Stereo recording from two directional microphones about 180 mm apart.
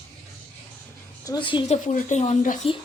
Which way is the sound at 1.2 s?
25° left (ahead or behind).